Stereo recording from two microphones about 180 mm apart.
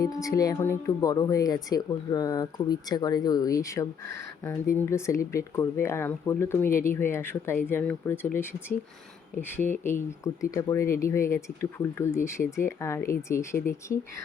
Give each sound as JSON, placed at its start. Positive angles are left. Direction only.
{"t": 0.0, "sound": "speech", "side_deg": 20}
{"t": 9.4, "sound": "speech", "side_deg": 10}